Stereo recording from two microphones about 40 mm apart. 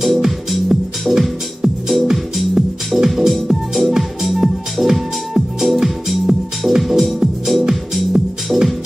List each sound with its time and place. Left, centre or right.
0.0 s music: centre